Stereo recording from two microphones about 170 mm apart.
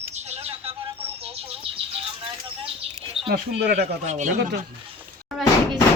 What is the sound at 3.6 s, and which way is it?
Speech, 75° right (ahead or behind).